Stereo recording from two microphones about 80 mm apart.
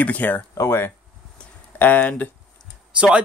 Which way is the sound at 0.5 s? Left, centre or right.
Left.